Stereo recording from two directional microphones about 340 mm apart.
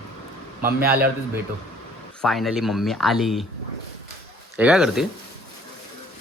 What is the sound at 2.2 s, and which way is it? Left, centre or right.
A man's voice, centre.